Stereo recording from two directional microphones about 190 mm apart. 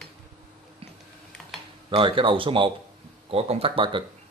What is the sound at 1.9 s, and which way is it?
Speech, 25° right (ahead or behind).